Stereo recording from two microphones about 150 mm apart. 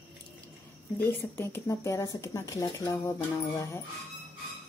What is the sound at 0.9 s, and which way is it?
Speech, 15° left (ahead or behind).